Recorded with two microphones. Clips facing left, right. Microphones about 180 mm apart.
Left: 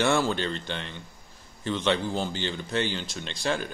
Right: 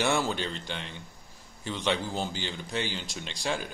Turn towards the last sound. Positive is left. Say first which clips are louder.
# left 3 dB
turn(degrees=-15)  # may be behind; listen again after turning